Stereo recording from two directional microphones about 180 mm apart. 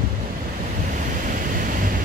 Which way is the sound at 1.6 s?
45° right (ahead or behind).